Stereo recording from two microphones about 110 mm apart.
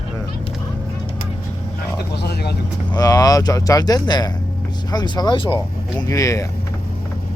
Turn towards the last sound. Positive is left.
turn(degrees=30)  # may be behind; listen again after turning